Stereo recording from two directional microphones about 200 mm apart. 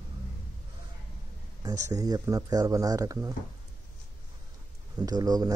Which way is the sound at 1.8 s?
20° right (ahead or behind).